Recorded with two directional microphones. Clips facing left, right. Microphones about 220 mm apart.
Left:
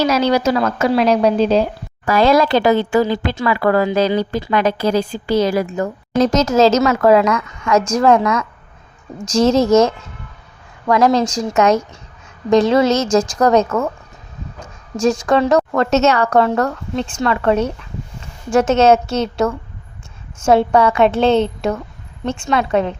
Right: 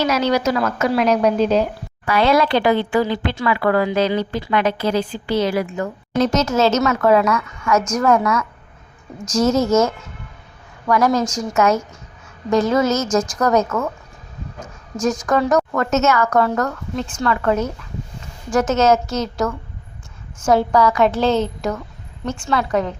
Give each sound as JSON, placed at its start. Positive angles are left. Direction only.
{"t": 0.0, "sound": "a woman's voice", "side_deg": 35}
{"t": 2.1, "sound": "a woman's voice", "side_deg": 40}
{"t": 9.2, "sound": "a woman's voice", "side_deg": 30}
{"t": 12.5, "sound": "a woman's voice", "side_deg": 75}
{"t": 12.7, "sound": "a woman's voice", "side_deg": 30}
{"t": 14.9, "sound": "a woman's voice", "side_deg": 30}